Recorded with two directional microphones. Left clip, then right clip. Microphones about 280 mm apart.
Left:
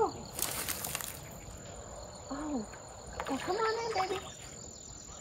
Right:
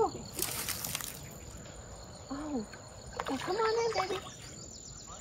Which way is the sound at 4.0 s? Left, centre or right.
Centre.